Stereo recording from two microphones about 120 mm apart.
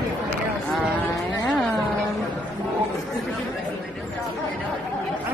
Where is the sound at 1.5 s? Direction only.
Centre (ahead or behind).